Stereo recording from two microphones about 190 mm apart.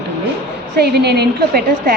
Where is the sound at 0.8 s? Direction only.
60° right (ahead or behind).